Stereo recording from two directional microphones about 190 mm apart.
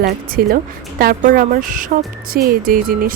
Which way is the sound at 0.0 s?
50° right (ahead or behind).